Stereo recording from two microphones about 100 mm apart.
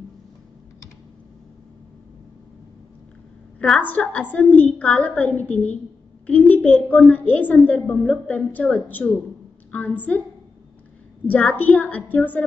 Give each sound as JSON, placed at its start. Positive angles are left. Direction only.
{"t": 3.5, "sound": "a woman's voice", "side_deg": 10}
{"t": 11.2, "sound": "a woman's voice", "side_deg": 15}